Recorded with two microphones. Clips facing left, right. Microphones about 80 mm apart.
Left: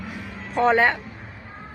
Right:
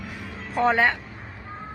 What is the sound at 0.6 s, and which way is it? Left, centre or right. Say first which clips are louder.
Speech: left 2 dB; centre.